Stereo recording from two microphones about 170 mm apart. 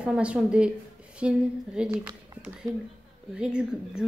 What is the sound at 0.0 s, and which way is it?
A woman's voice, 5° right (ahead or behind).